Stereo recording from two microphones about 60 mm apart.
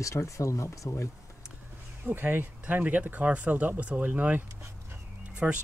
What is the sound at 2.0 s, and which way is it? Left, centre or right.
Speech, right.